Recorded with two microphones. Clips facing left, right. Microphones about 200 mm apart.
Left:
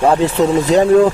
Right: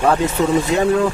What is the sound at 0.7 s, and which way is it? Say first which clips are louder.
Speech: left 6 dB; 35° left (ahead or behind).